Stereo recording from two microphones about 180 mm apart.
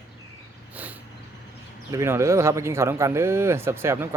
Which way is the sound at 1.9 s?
15° right (ahead or behind).